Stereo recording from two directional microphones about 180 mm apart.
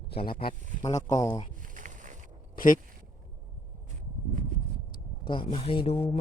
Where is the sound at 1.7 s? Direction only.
45° right (ahead or behind).